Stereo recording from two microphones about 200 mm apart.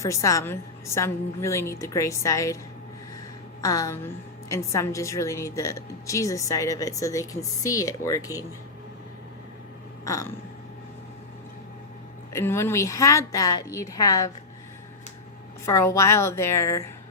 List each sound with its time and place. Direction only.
0.0 s a woman's voice: 15° left (ahead or behind)
3.6 s a woman's voice: 15° left (ahead or behind)
10.0 s a sound: 15° left (ahead or behind)
12.3 s a woman's voice: 15° left (ahead or behind)
15.6 s a woman's voice: 15° left (ahead or behind)